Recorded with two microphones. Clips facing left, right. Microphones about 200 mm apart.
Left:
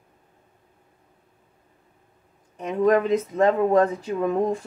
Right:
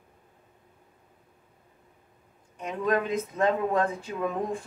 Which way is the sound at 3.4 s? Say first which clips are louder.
Left 6 dB; 40° left (ahead or behind).